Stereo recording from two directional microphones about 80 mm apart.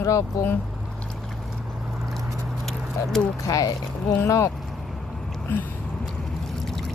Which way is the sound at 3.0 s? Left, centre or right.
Left.